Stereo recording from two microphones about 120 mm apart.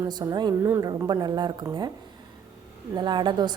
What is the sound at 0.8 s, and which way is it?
A woman's voice, 35° right (ahead or behind).